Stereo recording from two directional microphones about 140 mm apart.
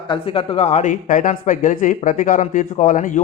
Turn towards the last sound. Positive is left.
turn(degrees=70)  # may be behind; listen again after turning